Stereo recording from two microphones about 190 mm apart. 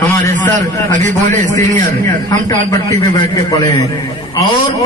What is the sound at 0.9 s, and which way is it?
Speech, 40° right (ahead or behind).